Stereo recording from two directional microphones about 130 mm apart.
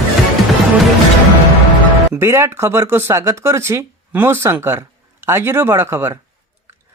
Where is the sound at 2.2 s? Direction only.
20° right (ahead or behind).